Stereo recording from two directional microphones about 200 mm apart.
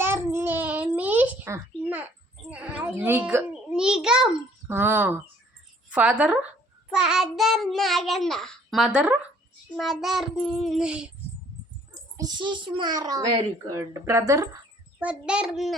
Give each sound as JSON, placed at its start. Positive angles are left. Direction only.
{"t": 0.0, "sound": "babbling", "side_deg": -10}
{"t": 2.5, "sound": "a child's voice", "side_deg": -5}
{"t": 12.1, "sound": "a child's voice", "side_deg": -20}